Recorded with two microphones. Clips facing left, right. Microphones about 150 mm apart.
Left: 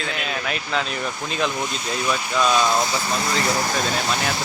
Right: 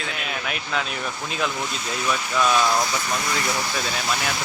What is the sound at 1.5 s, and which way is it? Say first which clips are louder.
Speech: left 2 dB; 15° left (ahead or behind).